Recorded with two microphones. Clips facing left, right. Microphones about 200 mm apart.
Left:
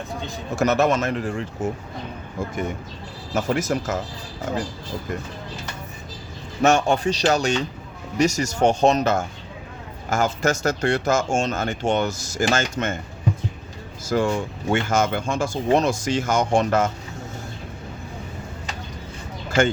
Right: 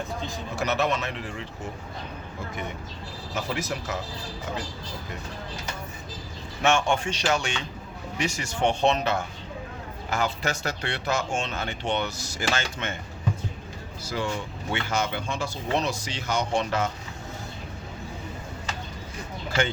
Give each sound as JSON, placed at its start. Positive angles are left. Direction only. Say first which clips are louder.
{"t": 0.5, "sound": "speech", "louder": "left 7 dB", "side_deg": 45}
{"t": 3.3, "sound": "speech", "louder": "left 8 dB", "side_deg": 45}
{"t": 6.6, "sound": "speech", "louder": "left 5 dB", "side_deg": 40}
{"t": 14.0, "sound": "speech", "louder": "left 8 dB", "side_deg": 50}
{"t": 19.5, "sound": "speech", "louder": "left 7 dB", "side_deg": 45}